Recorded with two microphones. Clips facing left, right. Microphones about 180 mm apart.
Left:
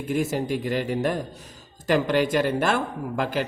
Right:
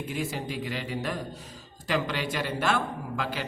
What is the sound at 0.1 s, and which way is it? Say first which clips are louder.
A man's voice: left 10 dB; 45° left (ahead or behind).